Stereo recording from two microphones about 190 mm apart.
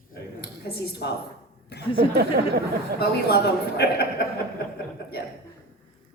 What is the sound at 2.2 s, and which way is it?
Speech, 60° right (ahead or behind).